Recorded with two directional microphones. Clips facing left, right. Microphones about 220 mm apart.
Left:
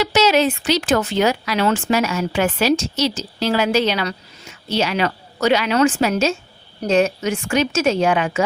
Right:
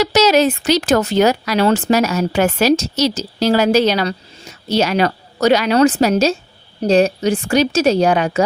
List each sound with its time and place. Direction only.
0.0 s speech: 40° right (ahead or behind)